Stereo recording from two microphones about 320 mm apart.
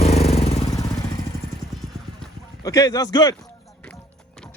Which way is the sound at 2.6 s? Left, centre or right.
Centre.